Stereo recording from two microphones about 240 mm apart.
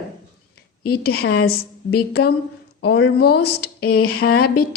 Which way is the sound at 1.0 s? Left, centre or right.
Left.